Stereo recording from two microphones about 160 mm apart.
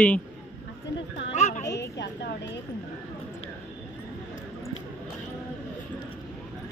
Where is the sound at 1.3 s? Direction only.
45° left (ahead or behind).